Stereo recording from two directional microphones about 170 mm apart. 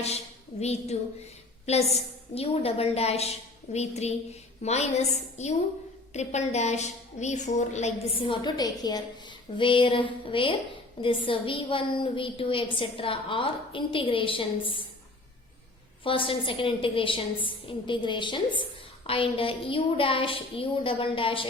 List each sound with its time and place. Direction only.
0.6 s a woman's voice: 40° left (ahead or behind)
16.0 s a woman's voice: 30° left (ahead or behind)